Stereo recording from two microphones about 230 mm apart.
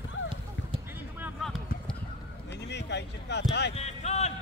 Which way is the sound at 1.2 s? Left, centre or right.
Centre.